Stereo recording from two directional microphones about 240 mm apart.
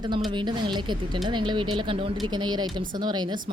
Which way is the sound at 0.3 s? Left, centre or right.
Centre.